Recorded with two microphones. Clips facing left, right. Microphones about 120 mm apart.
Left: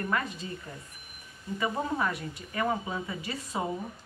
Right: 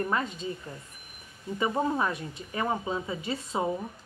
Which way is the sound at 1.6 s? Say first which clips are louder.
Right 3 dB; 20° right (ahead or behind).